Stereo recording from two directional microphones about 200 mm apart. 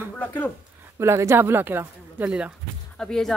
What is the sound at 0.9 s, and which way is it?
A woman's voice, 15° right (ahead or behind).